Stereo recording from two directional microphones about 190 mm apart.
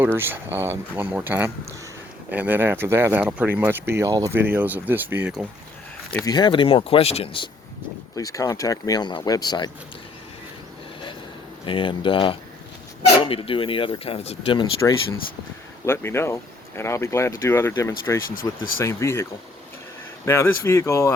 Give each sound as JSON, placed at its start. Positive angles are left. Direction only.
{"t": 0.0, "sound": "speech", "side_deg": -10}
{"t": 6.2, "sound": "speech", "side_deg": 20}
{"t": 8.1, "sound": "speech", "side_deg": 15}
{"t": 11.6, "sound": "speech", "side_deg": 25}
{"t": 15.9, "sound": "speech", "side_deg": 15}
{"t": 18.3, "sound": "speech", "side_deg": 45}
{"t": 18.8, "sound": "speech", "side_deg": 15}